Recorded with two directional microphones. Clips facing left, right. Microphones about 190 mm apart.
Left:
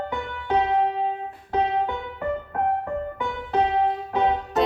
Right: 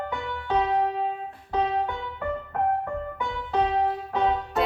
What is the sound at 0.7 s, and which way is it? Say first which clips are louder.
Keyboard: left 2 dB; 20° left (ahead or behind).